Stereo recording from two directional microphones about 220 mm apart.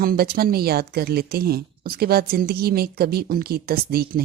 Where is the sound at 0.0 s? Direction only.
45° right (ahead or behind).